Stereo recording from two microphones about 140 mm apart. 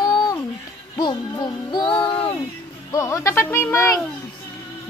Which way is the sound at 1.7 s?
35° left (ahead or behind).